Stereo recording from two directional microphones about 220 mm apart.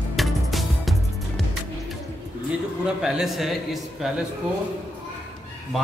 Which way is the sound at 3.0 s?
Centre (ahead or behind).